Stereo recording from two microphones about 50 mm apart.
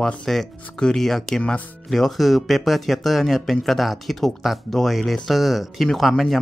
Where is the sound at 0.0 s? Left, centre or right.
Centre.